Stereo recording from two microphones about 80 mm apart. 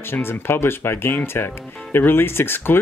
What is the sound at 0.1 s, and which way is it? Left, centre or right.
Speech, left.